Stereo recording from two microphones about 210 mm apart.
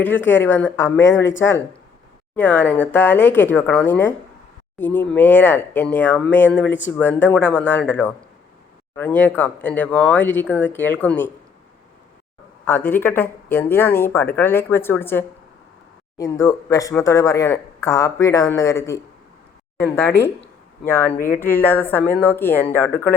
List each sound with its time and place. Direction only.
0.0 s speech: 10° left (ahead or behind)
6.7 s speech: 60° left (ahead or behind)
6.9 s speech: 10° left (ahead or behind)
12.6 s speech: 10° left (ahead or behind)
20.2 s speech: 10° left (ahead or behind)
21.2 s speech: 40° left (ahead or behind)
21.4 s speech: 10° left (ahead or behind)